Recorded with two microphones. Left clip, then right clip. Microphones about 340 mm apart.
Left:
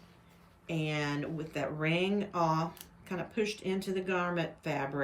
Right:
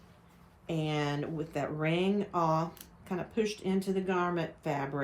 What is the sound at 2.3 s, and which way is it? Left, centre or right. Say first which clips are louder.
Speech: right 1 dB; right.